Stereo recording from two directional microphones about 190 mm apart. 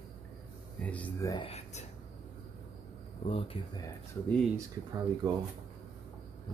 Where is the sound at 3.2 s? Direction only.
30° left (ahead or behind).